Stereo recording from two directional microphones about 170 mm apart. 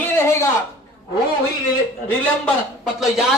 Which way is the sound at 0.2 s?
15° left (ahead or behind).